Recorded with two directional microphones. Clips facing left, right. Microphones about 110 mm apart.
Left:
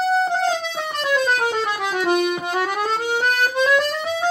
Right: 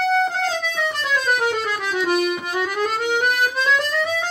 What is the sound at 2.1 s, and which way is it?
Music, 30° left (ahead or behind).